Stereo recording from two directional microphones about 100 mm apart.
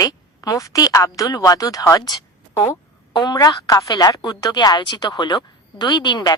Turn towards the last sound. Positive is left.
turn(degrees=50)  # may be behind; listen again after turning